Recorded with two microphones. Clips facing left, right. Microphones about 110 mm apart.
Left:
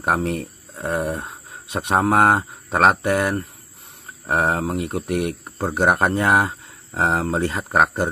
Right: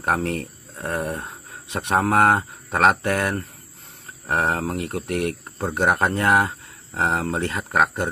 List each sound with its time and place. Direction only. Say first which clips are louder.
0.0 s speech: left 2 dB; 25° left (ahead or behind)